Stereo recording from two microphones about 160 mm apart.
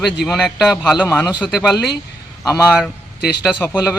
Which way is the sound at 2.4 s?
20° left (ahead or behind).